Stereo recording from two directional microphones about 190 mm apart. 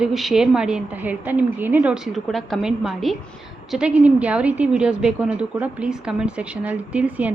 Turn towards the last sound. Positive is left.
turn(degrees=-10)  # may be behind; listen again after turning